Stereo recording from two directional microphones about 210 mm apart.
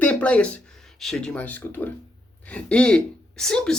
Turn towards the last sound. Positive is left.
turn(degrees=5)  # may be behind; listen again after turning